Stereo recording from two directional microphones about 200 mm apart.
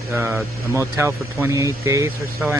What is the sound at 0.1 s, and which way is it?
Speech, 10° right (ahead or behind).